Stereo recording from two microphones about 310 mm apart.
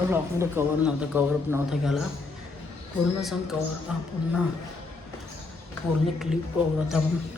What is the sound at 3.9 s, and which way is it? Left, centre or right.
Speech, centre.